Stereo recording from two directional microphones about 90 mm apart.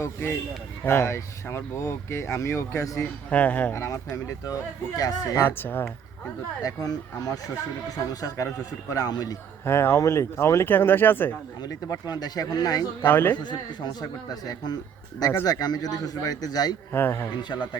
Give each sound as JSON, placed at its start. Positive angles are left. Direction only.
{"t": 0.0, "sound": "speech", "side_deg": 30}
{"t": 3.0, "sound": "speech", "side_deg": 15}
{"t": 3.7, "sound": "a man's voice", "side_deg": 35}
{"t": 5.5, "sound": "speech", "side_deg": 20}
{"t": 6.6, "sound": "a man's voice", "side_deg": 40}
{"t": 9.6, "sound": "speech", "side_deg": 25}
{"t": 11.6, "sound": "a man's voice", "side_deg": 45}
{"t": 13.1, "sound": "speech", "side_deg": 25}
{"t": 13.3, "sound": "a man's voice", "side_deg": 55}
{"t": 16.9, "sound": "speech", "side_deg": 25}